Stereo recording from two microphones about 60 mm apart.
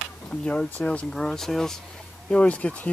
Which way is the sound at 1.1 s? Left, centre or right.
Centre.